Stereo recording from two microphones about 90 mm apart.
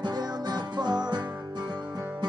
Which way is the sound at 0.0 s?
50° right (ahead or behind).